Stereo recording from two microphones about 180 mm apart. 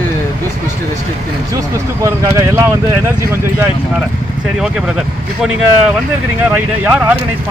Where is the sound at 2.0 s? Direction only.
15° right (ahead or behind).